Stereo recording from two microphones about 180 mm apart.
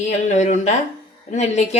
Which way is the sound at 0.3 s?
40° left (ahead or behind).